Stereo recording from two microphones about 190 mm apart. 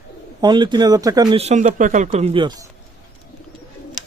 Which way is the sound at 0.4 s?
25° right (ahead or behind).